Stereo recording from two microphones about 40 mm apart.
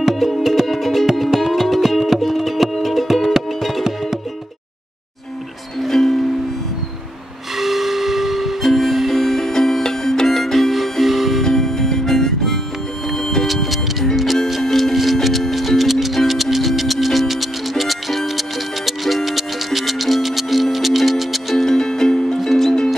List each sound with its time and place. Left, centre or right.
0.1 s music: centre
5.8 s music: centre
7.5 s steam whistle: centre
8.6 s music: centre
11.4 s harmonica: centre
13.1 s music: centre
13.5 s music: centre
21.6 s music: centre